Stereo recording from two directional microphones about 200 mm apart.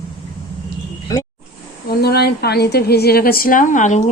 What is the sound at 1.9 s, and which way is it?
A woman's voice, 55° left (ahead or behind).